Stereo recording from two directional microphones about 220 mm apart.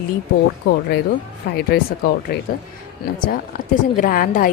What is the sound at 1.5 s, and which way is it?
Speech, 45° left (ahead or behind).